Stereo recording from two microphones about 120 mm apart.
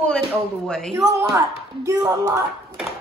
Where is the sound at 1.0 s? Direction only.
25° right (ahead or behind).